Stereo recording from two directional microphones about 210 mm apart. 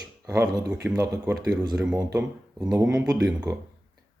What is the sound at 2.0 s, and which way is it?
Speech, 15° right (ahead or behind).